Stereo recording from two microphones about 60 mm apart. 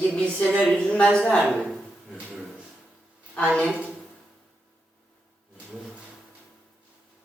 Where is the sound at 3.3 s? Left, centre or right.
Centre.